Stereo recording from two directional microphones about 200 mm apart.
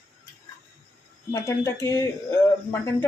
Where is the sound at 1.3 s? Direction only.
15° left (ahead or behind).